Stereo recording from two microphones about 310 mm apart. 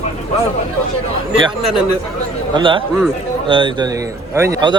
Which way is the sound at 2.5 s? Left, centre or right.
Centre.